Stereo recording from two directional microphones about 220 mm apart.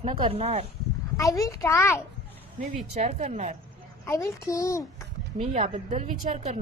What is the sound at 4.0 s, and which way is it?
Speech, 15° left (ahead or behind).